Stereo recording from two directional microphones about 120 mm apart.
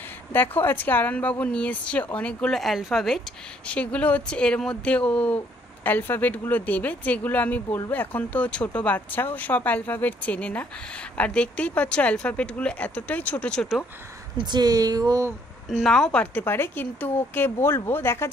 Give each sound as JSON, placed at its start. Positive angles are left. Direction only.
{"t": 0.3, "sound": "speech", "side_deg": 15}
{"t": 14.3, "sound": "speech", "side_deg": -40}
{"t": 15.8, "sound": "speech", "side_deg": 5}